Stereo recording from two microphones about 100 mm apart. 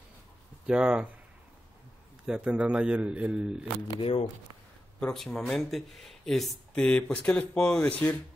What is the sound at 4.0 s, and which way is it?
Speech, 80° left.